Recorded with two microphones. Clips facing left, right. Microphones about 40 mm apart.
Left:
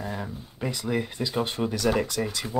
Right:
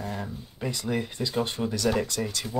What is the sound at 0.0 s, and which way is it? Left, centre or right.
Speech, centre.